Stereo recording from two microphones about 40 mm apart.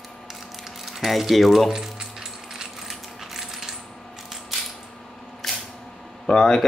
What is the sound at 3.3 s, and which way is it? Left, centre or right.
Coin, centre.